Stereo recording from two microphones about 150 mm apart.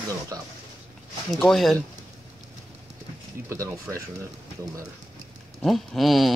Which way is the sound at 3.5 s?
20° right (ahead or behind).